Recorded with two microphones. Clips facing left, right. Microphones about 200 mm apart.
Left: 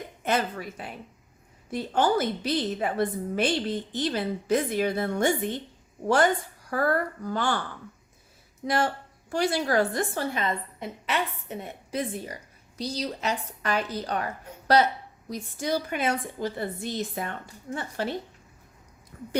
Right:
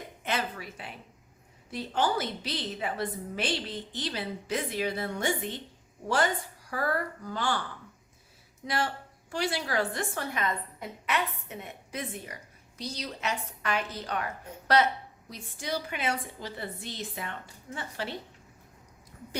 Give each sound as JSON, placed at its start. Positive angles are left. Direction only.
{"t": 0.3, "sound": "a woman's voice", "side_deg": 45}
{"t": 8.6, "sound": "a woman's voice", "side_deg": 45}
{"t": 15.3, "sound": "a woman's voice", "side_deg": 45}
{"t": 19.1, "sound": "a sound", "side_deg": 50}